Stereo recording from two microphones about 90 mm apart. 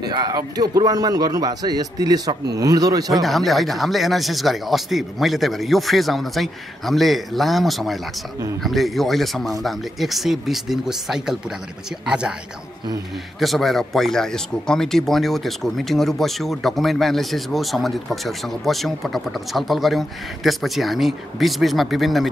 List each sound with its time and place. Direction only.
0.0 s a man's voice: 50° right (ahead or behind)
3.1 s speech: centre (ahead or behind)
13.4 s speech: centre (ahead or behind)